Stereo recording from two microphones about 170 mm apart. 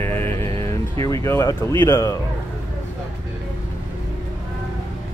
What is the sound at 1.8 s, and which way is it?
Speech, 15° left (ahead or behind).